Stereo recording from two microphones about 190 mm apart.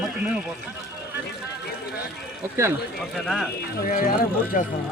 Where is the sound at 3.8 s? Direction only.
45° left (ahead or behind).